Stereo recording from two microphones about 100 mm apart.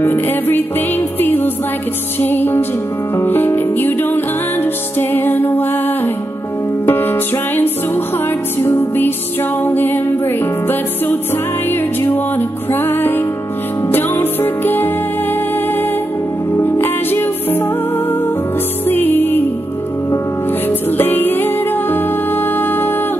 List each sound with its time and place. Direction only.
0.0 s music: 20° left (ahead or behind)
6.9 s music: 20° left (ahead or behind)
16.5 s music: 20° left (ahead or behind)
18.9 s music: 20° left (ahead or behind)
21.0 s music: 20° left (ahead or behind)